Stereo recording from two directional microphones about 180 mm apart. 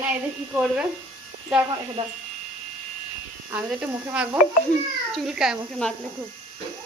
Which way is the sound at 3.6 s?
5° right (ahead or behind).